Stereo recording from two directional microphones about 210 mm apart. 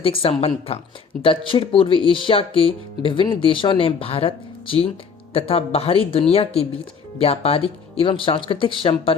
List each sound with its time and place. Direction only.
0.0 s speech: 25° left (ahead or behind)